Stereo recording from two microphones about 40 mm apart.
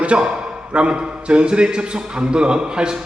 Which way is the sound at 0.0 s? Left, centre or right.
Right.